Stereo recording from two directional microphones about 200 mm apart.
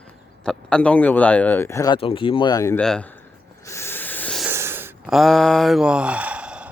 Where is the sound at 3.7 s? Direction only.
10° left (ahead or behind).